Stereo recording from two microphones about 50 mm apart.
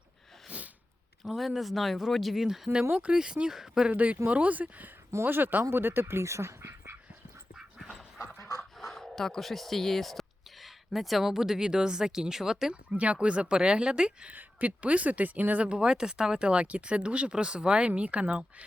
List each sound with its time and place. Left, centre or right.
0.4 s sneeze: right
1.2 s speech: centre
2.9 s speech: right
3.8 s speech: right
5.2 s speech: right
6.2 s dog: right
7.8 s dog: centre
8.8 s speech: centre
12.9 s speech: right
14.3 s speech: right
15.6 s speech: centre